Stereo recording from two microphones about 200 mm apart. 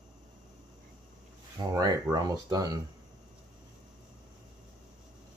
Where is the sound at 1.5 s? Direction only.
20° right (ahead or behind).